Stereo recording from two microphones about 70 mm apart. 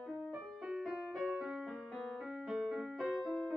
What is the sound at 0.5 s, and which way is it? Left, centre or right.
Music, centre.